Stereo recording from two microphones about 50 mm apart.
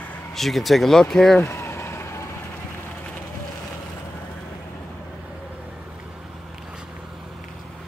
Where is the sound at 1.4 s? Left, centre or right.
Left.